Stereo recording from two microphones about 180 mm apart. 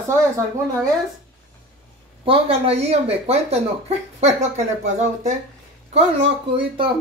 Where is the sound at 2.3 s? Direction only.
35° right (ahead or behind).